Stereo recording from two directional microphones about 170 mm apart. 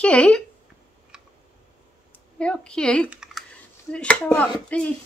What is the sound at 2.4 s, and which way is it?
Speech, 5° left (ahead or behind).